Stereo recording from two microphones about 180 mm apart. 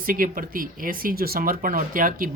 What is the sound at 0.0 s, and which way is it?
Speech, 50° right (ahead or behind).